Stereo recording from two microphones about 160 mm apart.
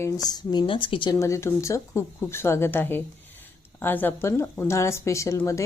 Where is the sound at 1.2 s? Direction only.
20° left (ahead or behind).